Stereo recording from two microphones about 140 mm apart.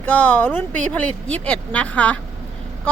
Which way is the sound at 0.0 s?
15° left (ahead or behind).